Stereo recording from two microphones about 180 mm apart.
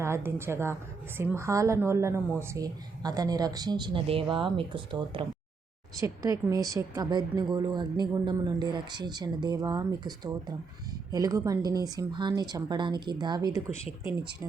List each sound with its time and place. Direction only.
0.0 s a woman's voice: 15° right (ahead or behind)